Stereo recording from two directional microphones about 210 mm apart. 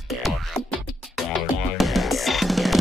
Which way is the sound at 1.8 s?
Centre (ahead or behind).